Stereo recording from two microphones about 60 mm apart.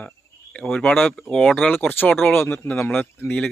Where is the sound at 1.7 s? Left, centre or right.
Left.